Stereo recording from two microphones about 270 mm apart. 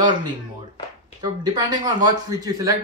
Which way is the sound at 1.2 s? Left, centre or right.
Centre.